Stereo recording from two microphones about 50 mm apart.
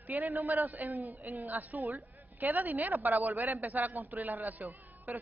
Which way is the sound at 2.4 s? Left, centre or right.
Right.